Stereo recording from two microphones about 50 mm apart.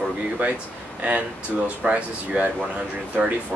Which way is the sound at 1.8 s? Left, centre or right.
Right.